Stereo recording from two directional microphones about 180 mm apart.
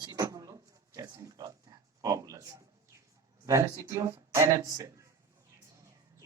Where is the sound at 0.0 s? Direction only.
20° right (ahead or behind).